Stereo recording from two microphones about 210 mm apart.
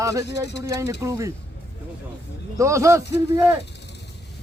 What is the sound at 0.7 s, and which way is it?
Speech, 15° right (ahead or behind).